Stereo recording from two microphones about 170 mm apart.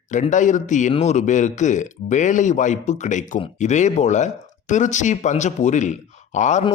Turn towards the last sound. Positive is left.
turn(degrees=45)  # may be behind; listen again after turning